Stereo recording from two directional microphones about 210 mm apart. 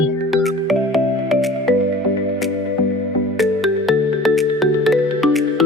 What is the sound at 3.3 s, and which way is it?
Music, centre (ahead or behind).